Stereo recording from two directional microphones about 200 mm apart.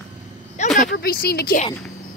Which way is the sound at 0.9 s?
50° left (ahead or behind).